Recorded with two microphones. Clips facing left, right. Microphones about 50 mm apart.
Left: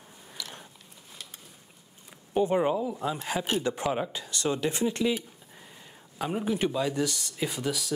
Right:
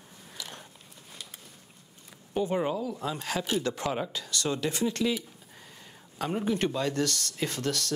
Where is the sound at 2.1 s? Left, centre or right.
Centre.